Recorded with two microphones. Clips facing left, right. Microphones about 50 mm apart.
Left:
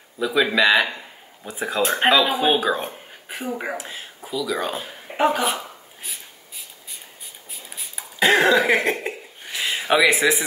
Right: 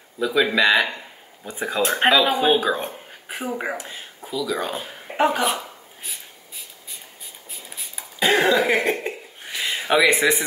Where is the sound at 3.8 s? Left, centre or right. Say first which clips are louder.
Left 1 dB; centre.